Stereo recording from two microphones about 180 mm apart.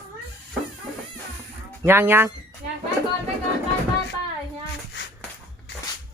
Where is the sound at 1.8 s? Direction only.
15° right (ahead or behind).